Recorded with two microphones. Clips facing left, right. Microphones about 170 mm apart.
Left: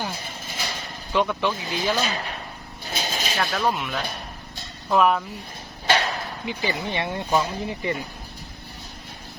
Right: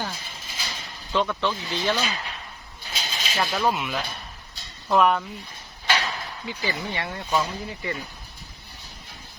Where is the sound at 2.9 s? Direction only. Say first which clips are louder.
Left 5 dB; 50° left (ahead or behind).